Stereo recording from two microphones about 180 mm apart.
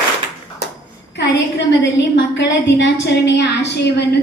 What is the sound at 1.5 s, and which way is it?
A woman's voice, 85° left.